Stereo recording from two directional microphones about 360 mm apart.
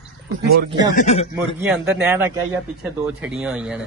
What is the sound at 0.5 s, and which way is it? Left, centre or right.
Speech, right.